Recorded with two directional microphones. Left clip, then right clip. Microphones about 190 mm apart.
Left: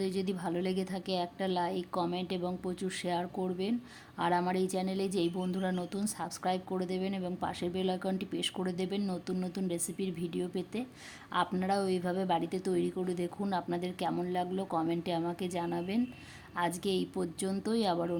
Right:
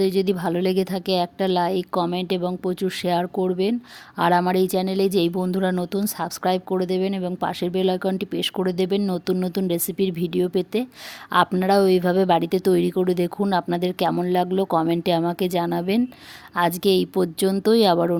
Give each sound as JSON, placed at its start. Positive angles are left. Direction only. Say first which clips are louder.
{"t": 0.0, "sound": "speech", "louder": "right 14 dB", "side_deg": -45}